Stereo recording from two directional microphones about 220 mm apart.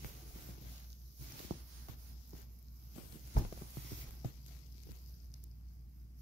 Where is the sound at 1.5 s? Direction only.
50° right (ahead or behind).